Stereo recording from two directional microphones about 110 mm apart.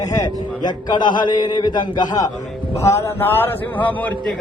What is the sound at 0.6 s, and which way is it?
A man's voice, 40° left (ahead or behind).